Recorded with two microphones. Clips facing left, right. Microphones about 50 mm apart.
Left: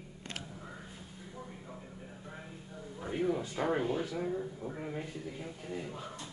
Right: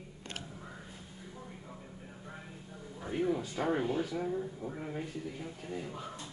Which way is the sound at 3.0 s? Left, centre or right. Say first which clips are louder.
Even; centre.